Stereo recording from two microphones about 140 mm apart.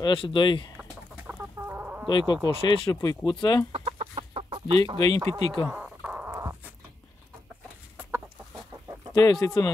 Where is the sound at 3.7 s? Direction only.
45° right (ahead or behind).